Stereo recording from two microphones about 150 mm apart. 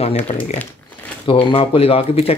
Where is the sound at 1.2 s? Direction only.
35° left (ahead or behind).